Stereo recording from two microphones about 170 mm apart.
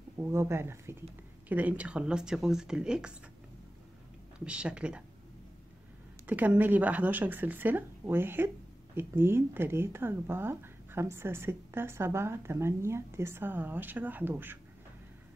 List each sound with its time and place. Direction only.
0.2 s speech: 15° right (ahead or behind)
4.5 s speech: 5° right (ahead or behind)
6.2 s speech: 10° right (ahead or behind)